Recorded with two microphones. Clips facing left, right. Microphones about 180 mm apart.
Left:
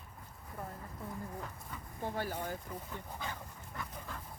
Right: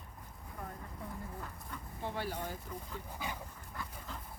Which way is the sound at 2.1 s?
45° left (ahead or behind).